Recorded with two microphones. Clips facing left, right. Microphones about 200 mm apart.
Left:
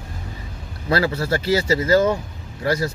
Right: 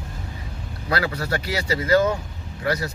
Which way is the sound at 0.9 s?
25° left (ahead or behind).